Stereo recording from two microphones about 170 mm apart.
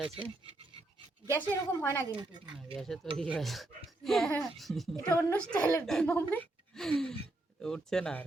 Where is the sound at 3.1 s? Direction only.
5° left (ahead or behind).